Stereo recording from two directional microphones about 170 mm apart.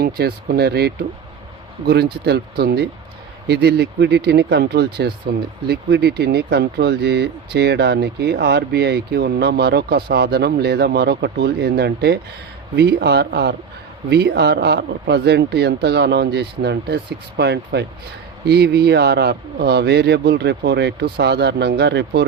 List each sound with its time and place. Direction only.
0.0 s a man's voice: 65° right (ahead or behind); by 17.8 s 90° right
18.4 s speech: 75° right (ahead or behind)